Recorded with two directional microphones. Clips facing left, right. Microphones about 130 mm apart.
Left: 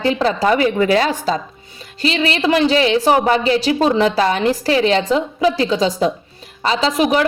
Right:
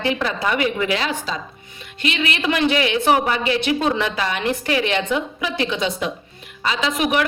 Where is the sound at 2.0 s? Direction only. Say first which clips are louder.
Left 5 dB; 35° left (ahead or behind).